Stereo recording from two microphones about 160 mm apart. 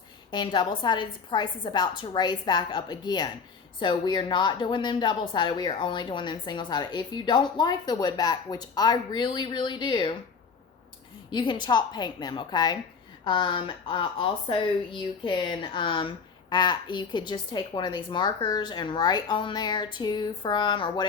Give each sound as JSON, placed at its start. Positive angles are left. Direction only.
{"t": 0.3, "sound": "speech", "side_deg": 30}
{"t": 11.3, "sound": "speech", "side_deg": 30}